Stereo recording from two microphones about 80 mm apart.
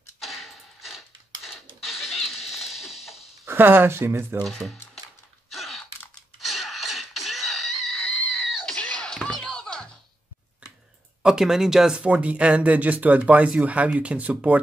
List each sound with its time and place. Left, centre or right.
0.2 s a sound: centre
3.4 s speech: right
4.5 s speech: centre
5.5 s a sound: centre
6.4 s music: centre
10.6 s clicking: centre
11.2 s speech: centre